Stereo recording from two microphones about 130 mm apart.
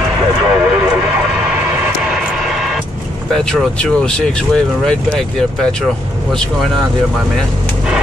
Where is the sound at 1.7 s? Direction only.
20° right (ahead or behind).